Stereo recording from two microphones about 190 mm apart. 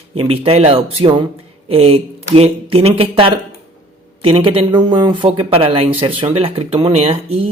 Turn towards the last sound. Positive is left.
turn(degrees=-30)  # may be behind; listen again after turning